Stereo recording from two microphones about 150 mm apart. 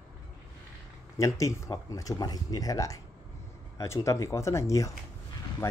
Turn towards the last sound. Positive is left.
turn(degrees=20)  # may be behind; listen again after turning